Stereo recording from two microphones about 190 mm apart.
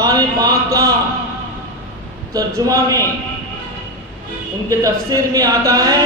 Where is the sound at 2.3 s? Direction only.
15° right (ahead or behind).